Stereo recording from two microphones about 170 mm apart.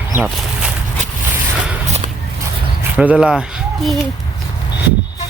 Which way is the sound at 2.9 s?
5° right (ahead or behind).